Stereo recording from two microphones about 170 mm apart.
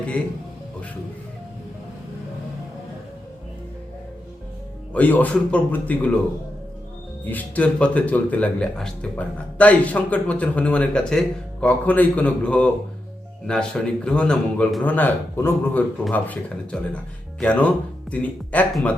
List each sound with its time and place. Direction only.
4.9 s speech: 10° left (ahead or behind)
7.3 s a man's voice: 10° left (ahead or behind)